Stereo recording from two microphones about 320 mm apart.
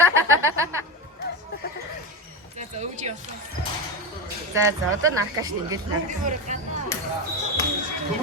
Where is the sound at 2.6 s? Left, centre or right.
Right.